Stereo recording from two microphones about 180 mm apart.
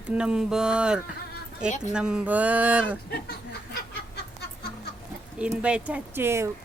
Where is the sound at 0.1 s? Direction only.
5° right (ahead or behind).